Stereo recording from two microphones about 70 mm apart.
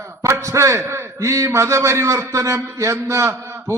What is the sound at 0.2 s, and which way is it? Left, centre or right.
A man's voice, right.